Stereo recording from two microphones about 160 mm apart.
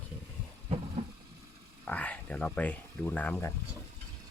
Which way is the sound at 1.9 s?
10° left (ahead or behind).